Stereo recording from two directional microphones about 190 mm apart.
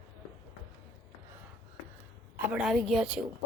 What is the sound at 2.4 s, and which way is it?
Speech, 5° right (ahead or behind).